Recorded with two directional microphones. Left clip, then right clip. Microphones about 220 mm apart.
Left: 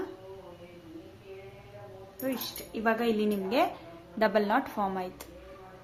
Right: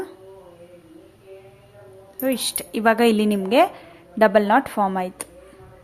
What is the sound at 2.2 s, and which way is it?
A woman's voice, 50° right (ahead or behind).